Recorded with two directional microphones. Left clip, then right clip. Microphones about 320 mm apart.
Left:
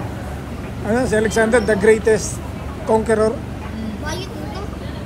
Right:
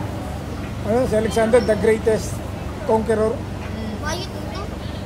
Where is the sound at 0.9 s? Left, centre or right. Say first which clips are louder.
Left 2 dB; left.